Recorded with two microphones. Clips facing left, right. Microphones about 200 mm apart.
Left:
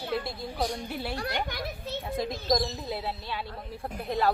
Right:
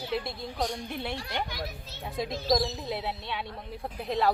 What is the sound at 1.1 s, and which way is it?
Speech, 60° left (ahead or behind).